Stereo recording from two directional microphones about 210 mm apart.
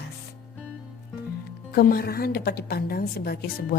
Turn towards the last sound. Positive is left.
turn(degrees=50)  # may be behind; listen again after turning